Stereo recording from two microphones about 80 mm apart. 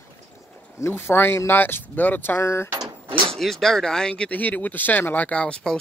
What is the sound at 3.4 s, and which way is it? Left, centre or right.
Speech, centre.